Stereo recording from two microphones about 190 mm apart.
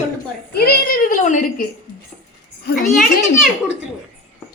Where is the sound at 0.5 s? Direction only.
50° left (ahead or behind).